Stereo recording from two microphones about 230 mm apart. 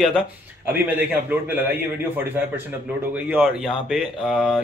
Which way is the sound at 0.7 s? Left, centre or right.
Centre.